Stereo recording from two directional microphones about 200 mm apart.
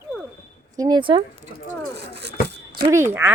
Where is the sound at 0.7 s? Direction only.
20° right (ahead or behind).